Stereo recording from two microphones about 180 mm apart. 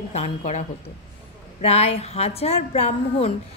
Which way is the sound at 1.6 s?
35° left (ahead or behind).